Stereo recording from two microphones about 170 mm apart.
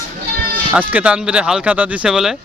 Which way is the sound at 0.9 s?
10° right (ahead or behind).